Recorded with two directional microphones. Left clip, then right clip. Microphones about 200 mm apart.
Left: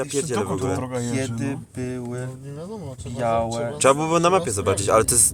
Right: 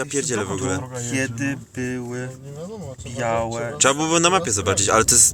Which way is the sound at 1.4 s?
5° right (ahead or behind).